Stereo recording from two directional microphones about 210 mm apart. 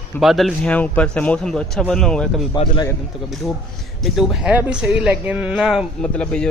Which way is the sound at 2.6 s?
20° left (ahead or behind).